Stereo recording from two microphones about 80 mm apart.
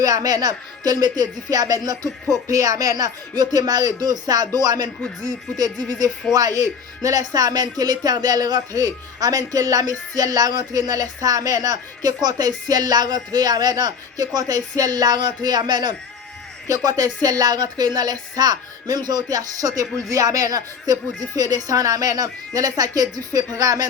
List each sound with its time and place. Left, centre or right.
0.0 s speech: right
6.3 s speech: right
16.6 s speech: right